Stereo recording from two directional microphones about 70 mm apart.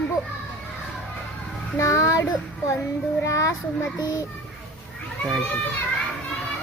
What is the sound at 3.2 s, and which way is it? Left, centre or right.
A child's voice, left.